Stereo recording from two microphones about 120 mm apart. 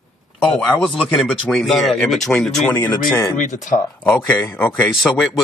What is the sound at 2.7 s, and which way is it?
Speech, 15° left (ahead or behind).